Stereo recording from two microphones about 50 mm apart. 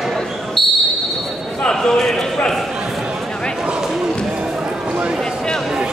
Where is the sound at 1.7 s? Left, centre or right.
Centre.